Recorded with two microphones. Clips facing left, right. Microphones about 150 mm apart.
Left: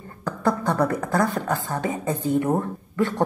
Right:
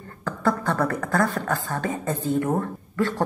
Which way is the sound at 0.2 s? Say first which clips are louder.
Left 1 dB; 15° left (ahead or behind).